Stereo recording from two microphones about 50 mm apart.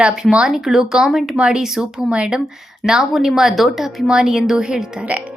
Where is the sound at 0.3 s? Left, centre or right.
Centre.